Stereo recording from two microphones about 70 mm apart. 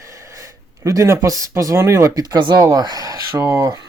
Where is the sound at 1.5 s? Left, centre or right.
Right.